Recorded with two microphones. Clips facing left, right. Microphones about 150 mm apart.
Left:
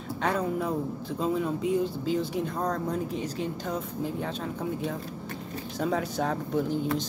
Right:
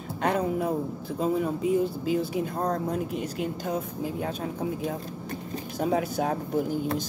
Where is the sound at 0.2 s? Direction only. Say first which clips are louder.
Right 2 dB; 55° right (ahead or behind).